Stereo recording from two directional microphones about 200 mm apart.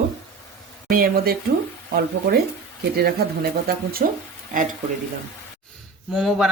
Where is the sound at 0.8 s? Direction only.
45° right (ahead or behind).